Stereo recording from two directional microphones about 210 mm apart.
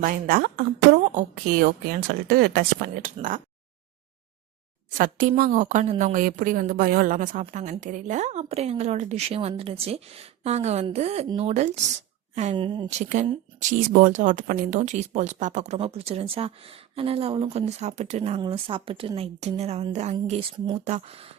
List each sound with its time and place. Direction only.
0.0 s a woman's voice: 40° right (ahead or behind)
4.9 s a woman's voice: 40° right (ahead or behind)